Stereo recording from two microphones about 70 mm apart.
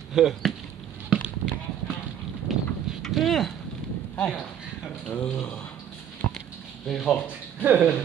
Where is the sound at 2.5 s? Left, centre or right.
Centre.